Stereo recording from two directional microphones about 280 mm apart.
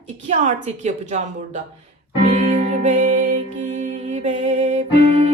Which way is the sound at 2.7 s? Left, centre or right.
Right.